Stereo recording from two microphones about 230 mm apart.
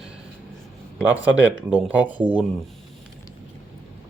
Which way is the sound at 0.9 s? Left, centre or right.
Centre.